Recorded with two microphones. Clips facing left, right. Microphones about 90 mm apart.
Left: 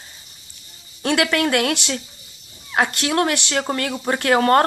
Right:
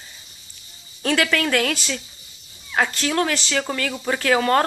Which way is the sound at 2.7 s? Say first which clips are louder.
Left 2 dB; 30° left (ahead or behind).